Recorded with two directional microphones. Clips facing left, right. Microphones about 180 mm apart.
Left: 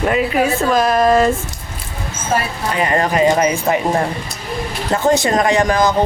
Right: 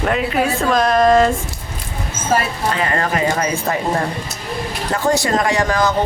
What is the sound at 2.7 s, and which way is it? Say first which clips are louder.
Speech: left 5 dB; 15° left (ahead or behind).